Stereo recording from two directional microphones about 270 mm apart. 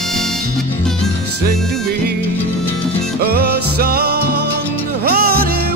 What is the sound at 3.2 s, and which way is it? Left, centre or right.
Music, right.